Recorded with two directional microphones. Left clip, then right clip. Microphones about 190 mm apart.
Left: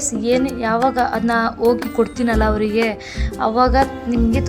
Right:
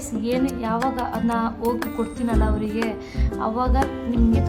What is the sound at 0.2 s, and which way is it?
Speech, 15° left (ahead or behind).